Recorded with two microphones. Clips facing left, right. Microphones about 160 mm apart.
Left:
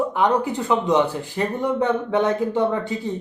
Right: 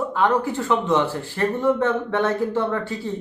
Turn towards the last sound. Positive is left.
turn(degrees=15)  # may be behind; listen again after turning